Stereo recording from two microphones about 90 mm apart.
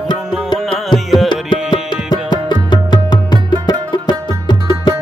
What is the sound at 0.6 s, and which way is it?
Music, 5° left (ahead or behind).